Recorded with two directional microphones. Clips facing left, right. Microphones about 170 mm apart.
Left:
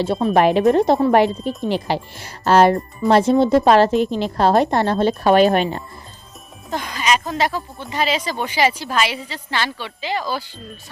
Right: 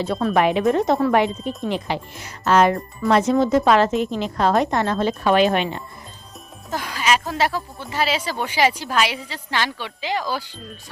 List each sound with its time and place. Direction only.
0.3 s speech: 35° left (ahead or behind)
3.9 s a woman's voice: centre (ahead or behind)
4.2 s speech: 35° left (ahead or behind)
6.7 s a woman's voice: 5° right (ahead or behind)